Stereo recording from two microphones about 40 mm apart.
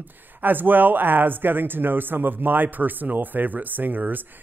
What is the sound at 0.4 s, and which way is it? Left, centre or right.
Speech, right.